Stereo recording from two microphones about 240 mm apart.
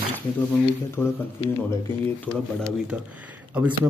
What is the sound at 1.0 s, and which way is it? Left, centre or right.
A man's voice, centre.